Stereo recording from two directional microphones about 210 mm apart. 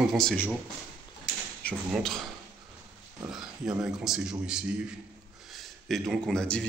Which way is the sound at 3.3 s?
Centre (ahead or behind).